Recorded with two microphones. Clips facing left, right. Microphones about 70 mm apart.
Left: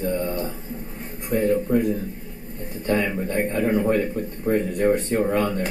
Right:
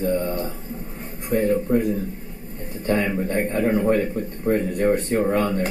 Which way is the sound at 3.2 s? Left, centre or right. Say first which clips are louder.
Right 1 dB; right.